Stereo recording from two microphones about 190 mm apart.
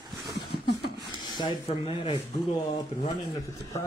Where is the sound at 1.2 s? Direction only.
25° left (ahead or behind).